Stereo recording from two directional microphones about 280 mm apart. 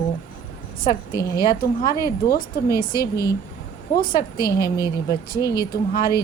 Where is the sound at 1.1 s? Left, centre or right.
Centre.